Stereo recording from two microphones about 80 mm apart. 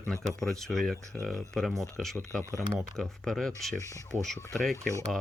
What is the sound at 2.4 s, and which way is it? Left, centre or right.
Speech, right.